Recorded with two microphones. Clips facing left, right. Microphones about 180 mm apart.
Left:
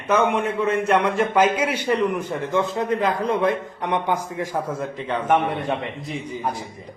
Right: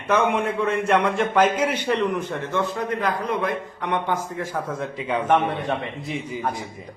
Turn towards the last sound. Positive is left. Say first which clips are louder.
# even
turn(degrees=0)  # may be behind; listen again after turning